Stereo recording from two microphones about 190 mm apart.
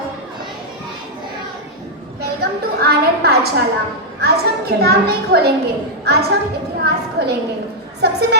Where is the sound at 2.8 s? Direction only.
55° right (ahead or behind).